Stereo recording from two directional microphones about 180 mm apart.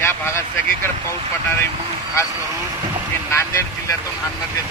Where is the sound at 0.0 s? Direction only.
15° left (ahead or behind).